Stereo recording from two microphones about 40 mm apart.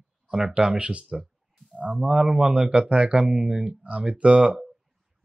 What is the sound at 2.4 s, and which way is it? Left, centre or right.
Speech, right.